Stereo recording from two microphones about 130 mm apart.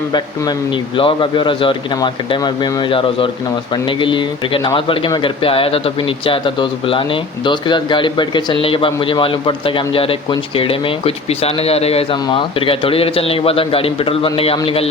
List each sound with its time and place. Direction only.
0.9 s a man's voice: 40° left (ahead or behind)